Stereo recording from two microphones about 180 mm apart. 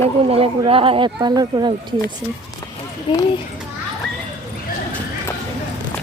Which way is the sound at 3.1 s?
30° left (ahead or behind).